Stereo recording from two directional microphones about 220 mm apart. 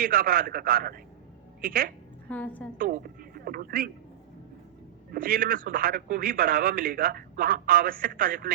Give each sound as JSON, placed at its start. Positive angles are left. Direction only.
{"t": 0.0, "sound": "speech", "side_deg": -45}
{"t": 2.3, "sound": "a woman's voice", "side_deg": 5}
{"t": 2.7, "sound": "a sound", "side_deg": -40}
{"t": 5.1, "sound": "speech", "side_deg": -45}